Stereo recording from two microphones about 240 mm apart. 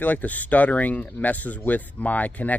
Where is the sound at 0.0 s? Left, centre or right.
Centre.